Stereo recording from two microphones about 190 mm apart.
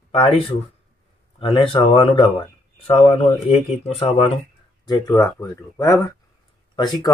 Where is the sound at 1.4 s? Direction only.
25° left (ahead or behind).